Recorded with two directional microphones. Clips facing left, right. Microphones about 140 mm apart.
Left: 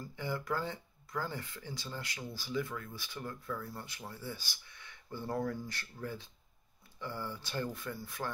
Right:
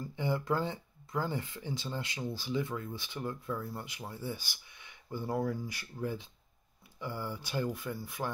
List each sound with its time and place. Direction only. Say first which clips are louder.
0.1 s speech: right 4 dB; 20° right (ahead or behind)